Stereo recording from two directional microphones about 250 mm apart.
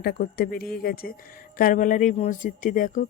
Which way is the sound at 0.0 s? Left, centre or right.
Left.